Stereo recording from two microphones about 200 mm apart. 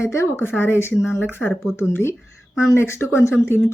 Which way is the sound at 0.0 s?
15° left (ahead or behind).